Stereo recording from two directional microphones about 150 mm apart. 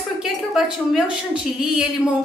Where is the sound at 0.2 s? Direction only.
5° right (ahead or behind).